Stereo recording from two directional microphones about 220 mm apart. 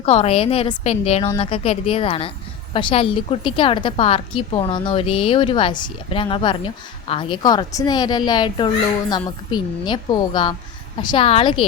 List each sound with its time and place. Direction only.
0.0 s a woman's voice: 30° left (ahead or behind)